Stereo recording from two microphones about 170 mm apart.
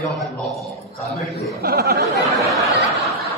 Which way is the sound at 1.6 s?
70° right (ahead or behind).